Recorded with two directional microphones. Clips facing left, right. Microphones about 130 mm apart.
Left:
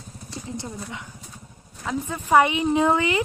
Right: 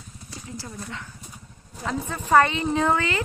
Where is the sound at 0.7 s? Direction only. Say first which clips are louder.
Left 1 dB; 10° left (ahead or behind).